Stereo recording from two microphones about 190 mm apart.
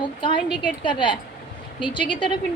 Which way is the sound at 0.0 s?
25° left (ahead or behind).